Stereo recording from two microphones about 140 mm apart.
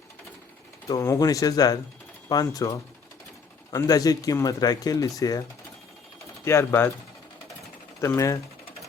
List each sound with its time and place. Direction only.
0.9 s speech: 25° left (ahead or behind)
6.4 s speech: 20° left (ahead or behind)
8.0 s speech: 20° left (ahead or behind)